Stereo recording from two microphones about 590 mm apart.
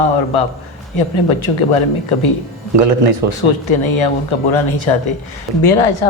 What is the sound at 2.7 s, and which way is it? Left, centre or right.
Speech, right.